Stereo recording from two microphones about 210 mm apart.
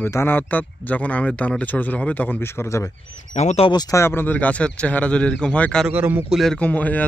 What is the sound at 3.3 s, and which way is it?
Speech, 35° left (ahead or behind).